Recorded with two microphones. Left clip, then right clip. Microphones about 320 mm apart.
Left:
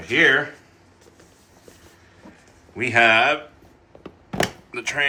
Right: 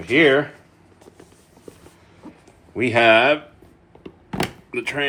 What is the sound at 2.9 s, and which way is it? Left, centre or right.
Speech, centre.